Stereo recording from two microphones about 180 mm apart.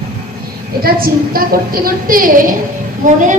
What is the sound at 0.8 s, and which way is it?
A woman's voice, 55° right (ahead or behind).